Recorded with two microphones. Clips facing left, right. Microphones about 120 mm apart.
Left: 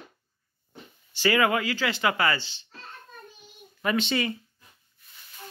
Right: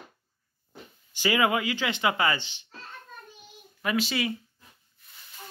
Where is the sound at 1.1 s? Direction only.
15° right (ahead or behind).